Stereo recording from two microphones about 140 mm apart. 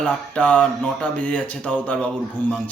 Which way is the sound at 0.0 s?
10° left (ahead or behind).